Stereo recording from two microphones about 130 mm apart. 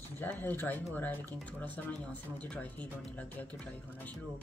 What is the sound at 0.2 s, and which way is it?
Speech, 15° left (ahead or behind).